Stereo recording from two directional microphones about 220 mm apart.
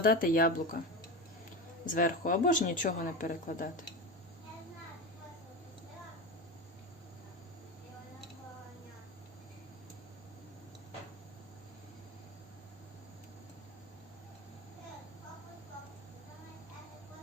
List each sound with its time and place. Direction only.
0.0 s speech: 40° left (ahead or behind)
1.9 s speech: 40° left (ahead or behind)